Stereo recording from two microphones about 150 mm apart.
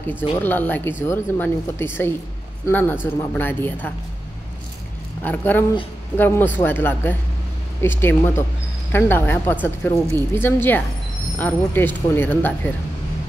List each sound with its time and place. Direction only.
0.4 s speech: 10° left (ahead or behind)
5.2 s speech: 10° left (ahead or behind)